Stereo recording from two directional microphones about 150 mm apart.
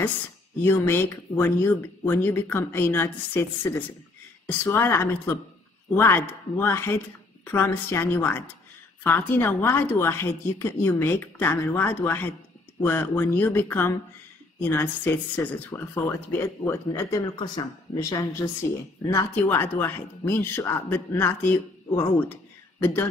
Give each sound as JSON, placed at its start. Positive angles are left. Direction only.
{"t": 0.7, "sound": "a woman's voice", "side_deg": 15}
{"t": 17.4, "sound": "speech", "side_deg": 30}
{"t": 19.3, "sound": "a woman's voice", "side_deg": 15}